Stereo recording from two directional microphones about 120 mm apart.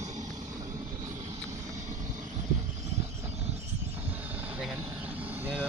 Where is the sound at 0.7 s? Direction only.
25° right (ahead or behind).